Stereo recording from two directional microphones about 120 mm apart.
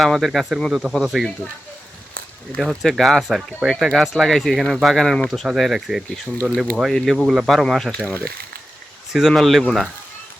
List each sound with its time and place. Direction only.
0.0 s speech: centre (ahead or behind)
2.6 s speech: centre (ahead or behind)
8.0 s speech: 15° left (ahead or behind)
9.1 s speech: centre (ahead or behind)